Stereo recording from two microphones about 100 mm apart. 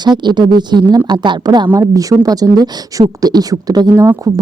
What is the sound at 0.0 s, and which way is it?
Speech, 50° right (ahead or behind).